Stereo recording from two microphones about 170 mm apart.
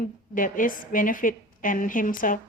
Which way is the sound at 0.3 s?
55° left (ahead or behind).